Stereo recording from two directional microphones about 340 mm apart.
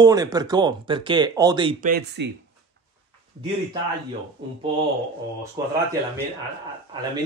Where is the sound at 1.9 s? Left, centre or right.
Right.